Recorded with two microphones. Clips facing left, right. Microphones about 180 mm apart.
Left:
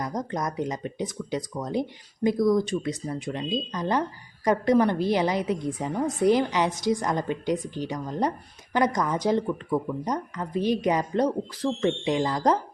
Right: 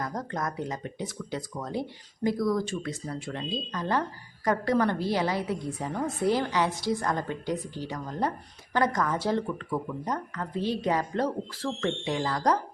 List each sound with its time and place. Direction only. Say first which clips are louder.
0.0 s speech: left 3 dB; 20° left (ahead or behind)